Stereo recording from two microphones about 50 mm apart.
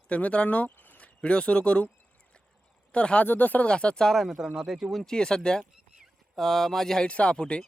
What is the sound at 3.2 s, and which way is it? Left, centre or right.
Speech, left.